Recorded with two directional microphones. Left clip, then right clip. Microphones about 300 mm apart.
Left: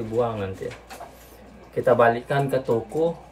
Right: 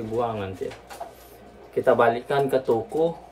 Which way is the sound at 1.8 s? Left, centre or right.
Centre.